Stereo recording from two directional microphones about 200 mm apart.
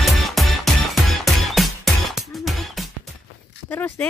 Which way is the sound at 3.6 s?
10° left (ahead or behind).